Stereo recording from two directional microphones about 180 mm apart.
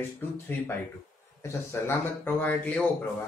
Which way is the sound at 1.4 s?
15° left (ahead or behind).